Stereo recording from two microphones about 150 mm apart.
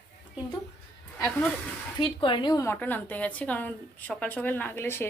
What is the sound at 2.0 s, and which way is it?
Speech, 35° left (ahead or behind).